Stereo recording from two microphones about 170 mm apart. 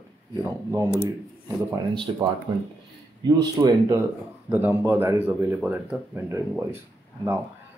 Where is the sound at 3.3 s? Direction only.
20° right (ahead or behind).